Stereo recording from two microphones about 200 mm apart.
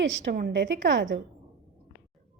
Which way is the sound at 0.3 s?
50° right (ahead or behind).